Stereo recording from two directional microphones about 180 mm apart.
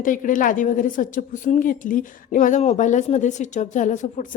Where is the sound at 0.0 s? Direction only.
45° left (ahead or behind).